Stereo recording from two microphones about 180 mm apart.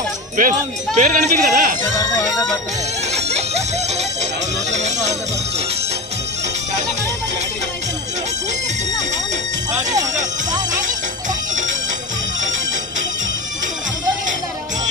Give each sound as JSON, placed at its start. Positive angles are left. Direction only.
{"t": 0.4, "sound": "speech", "side_deg": -45}
{"t": 3.1, "sound": "music", "side_deg": -35}
{"t": 9.7, "sound": "music", "side_deg": -40}